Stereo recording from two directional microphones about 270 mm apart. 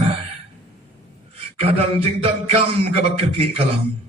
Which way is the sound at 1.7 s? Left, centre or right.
Right.